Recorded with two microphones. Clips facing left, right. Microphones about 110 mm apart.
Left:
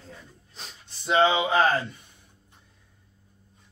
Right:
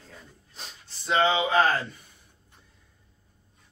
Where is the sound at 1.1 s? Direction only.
15° left (ahead or behind).